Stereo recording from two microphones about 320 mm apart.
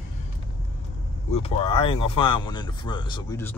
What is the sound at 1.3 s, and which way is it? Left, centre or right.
Speech, centre.